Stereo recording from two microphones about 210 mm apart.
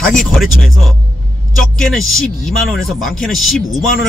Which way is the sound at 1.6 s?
5° left (ahead or behind).